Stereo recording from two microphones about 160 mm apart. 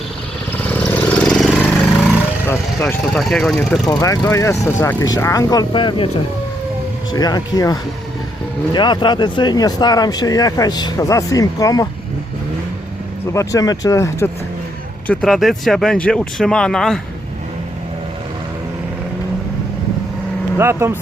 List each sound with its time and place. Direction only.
0.5 s vehicle: 10° left (ahead or behind)
2.5 s speech: 5° left (ahead or behind)
3.8 s speech: 25° left (ahead or behind)
7.1 s speech: 25° left (ahead or behind)
13.3 s speech: 20° left (ahead or behind)
15.0 s speech: 5° left (ahead or behind)
20.6 s speech: 15° right (ahead or behind)